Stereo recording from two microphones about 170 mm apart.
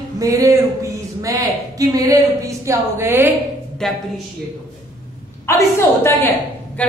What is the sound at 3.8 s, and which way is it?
Speech, 5° left (ahead or behind).